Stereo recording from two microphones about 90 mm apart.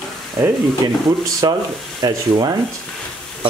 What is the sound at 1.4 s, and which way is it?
Speech, 50° right (ahead or behind).